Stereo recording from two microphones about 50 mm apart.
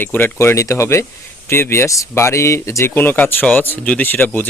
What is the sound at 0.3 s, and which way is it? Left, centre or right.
Speech, left.